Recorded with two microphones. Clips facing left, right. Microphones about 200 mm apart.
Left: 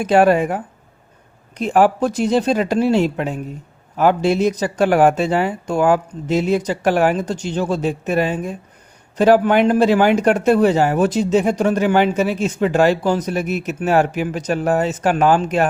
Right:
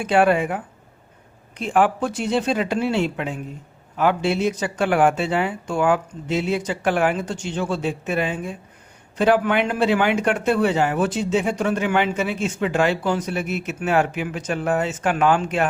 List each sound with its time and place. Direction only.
0.0 s speech: 40° left (ahead or behind)